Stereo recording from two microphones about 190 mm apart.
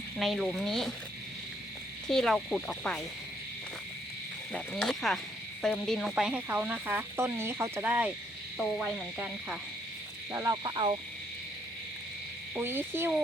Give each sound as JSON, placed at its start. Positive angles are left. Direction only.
{"t": 0.2, "sound": "frog", "side_deg": 0}
{"t": 2.0, "sound": "frog", "side_deg": 0}
{"t": 4.5, "sound": "frog", "side_deg": 0}
{"t": 5.6, "sound": "speech", "side_deg": 0}
{"t": 8.5, "sound": "frog", "side_deg": -5}
{"t": 10.3, "sound": "a sound", "side_deg": -15}
{"t": 12.5, "sound": "speech", "side_deg": -10}